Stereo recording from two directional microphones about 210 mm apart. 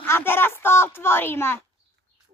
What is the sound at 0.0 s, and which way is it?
A woman's voice, 10° left (ahead or behind).